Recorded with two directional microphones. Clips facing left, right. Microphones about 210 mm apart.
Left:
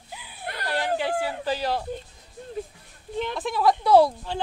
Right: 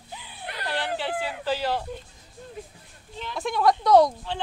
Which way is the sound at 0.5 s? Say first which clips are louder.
Left 2 dB; 40° left (ahead or behind).